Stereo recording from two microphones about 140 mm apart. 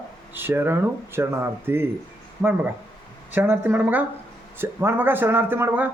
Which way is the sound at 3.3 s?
15° right (ahead or behind).